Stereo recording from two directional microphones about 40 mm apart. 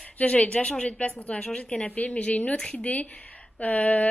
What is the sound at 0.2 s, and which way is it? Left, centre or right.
A woman's voice, left.